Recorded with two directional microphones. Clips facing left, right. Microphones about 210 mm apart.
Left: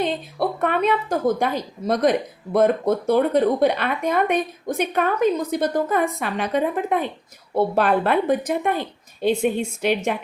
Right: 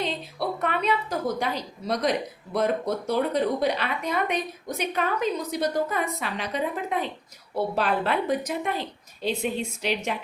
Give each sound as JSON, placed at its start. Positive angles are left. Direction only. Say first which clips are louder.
{"t": 0.0, "sound": "a woman's voice", "louder": "left 6 dB", "side_deg": 50}